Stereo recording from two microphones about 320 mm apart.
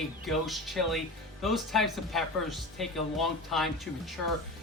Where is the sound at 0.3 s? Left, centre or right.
Centre.